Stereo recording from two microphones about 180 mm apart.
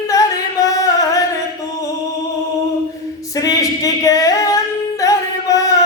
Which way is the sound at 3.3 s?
20° left (ahead or behind).